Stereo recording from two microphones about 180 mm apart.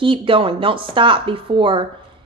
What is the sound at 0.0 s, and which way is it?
A woman's voice, 30° right (ahead or behind).